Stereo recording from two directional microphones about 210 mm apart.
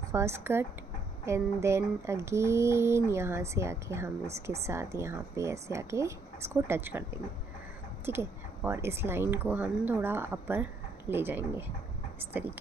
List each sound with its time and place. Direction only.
0.1 s speech: 15° right (ahead or behind)